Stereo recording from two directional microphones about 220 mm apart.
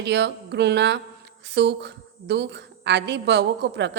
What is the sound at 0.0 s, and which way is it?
A woman's voice, 50° right (ahead or behind).